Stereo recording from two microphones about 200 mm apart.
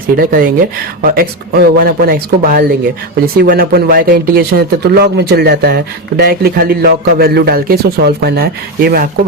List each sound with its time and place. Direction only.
0.2 s speech: 45° right (ahead or behind)